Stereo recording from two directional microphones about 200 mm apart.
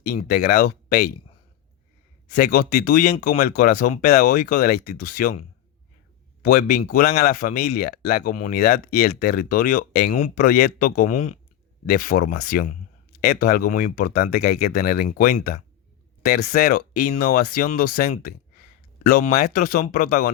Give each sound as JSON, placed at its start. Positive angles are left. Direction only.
{"t": 0.2, "sound": "speech", "side_deg": 40}
{"t": 2.2, "sound": "speech", "side_deg": 40}
{"t": 6.4, "sound": "speech", "side_deg": 45}